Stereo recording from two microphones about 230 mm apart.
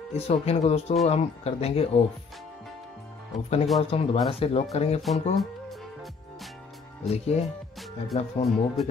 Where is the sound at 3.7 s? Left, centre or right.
Left.